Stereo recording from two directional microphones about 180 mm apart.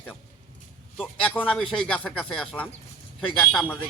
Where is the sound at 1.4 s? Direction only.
5° right (ahead or behind).